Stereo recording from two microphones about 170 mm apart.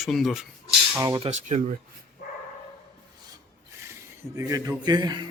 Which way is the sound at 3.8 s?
15° right (ahead or behind).